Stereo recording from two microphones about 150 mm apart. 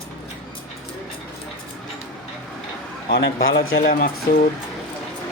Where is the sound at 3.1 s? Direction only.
90° left.